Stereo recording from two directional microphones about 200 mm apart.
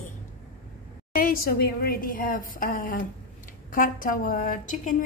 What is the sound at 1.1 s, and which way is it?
A woman's voice, 45° left (ahead or behind).